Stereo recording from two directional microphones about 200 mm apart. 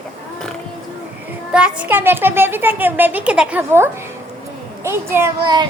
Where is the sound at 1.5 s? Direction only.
5° right (ahead or behind).